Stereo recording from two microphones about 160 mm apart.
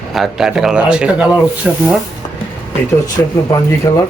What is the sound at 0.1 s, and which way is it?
Speech, centre (ahead or behind).